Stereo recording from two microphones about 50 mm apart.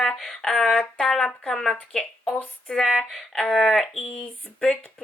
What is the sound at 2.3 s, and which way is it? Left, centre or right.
Speech, left.